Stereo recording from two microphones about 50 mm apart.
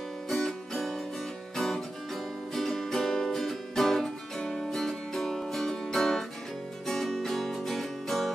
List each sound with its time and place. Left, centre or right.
0.3 s music: centre
2.5 s music: centre